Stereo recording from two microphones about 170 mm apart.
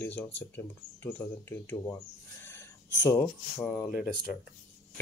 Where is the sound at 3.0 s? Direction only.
15° left (ahead or behind).